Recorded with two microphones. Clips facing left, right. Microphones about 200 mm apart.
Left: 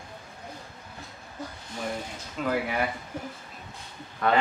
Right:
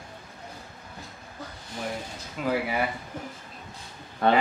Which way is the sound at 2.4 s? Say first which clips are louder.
Right 1 dB; 5° right (ahead or behind).